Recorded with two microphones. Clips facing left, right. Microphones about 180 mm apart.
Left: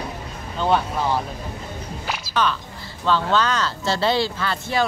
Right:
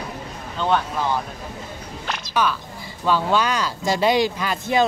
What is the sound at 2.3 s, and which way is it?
Speech, 10° right (ahead or behind).